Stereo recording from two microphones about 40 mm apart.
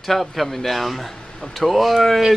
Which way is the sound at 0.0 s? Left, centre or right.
Centre.